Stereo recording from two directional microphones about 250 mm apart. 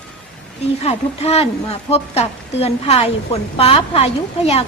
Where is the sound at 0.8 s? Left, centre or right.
Left.